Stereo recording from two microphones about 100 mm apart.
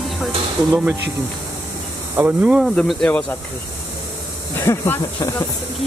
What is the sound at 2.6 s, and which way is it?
Speech, centre (ahead or behind).